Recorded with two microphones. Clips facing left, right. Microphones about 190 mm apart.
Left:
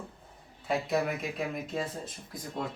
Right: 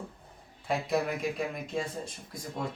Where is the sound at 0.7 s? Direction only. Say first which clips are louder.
Even; centre (ahead or behind).